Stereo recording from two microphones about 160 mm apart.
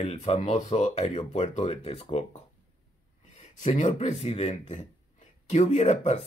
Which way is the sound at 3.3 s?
45° left (ahead or behind).